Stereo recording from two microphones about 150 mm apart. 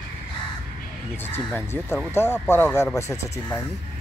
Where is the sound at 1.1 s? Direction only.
15° left (ahead or behind).